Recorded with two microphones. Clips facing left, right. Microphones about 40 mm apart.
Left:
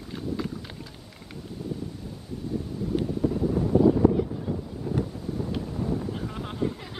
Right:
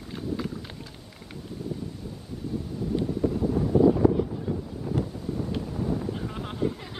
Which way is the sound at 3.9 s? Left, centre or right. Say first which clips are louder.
Left 1 dB; centre.